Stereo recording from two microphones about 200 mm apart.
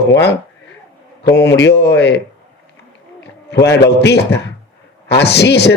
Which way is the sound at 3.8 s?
55° left (ahead or behind).